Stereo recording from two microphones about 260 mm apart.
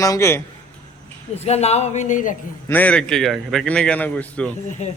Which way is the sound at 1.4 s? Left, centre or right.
Left.